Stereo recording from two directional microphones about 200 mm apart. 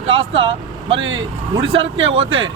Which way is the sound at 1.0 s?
70° right (ahead or behind).